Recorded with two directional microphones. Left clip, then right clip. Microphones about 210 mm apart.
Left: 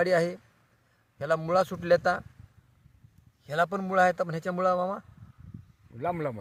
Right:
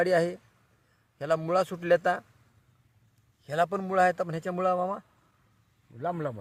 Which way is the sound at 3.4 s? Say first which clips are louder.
Even; 15° right (ahead or behind).